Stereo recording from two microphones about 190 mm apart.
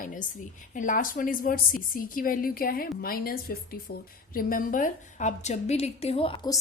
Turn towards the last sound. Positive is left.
turn(degrees=25)  # may be behind; listen again after turning